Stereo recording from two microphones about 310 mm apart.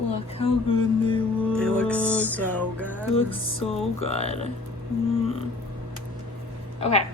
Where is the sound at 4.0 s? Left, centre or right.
Centre.